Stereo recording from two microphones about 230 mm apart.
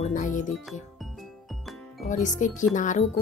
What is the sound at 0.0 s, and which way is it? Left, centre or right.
Music, left.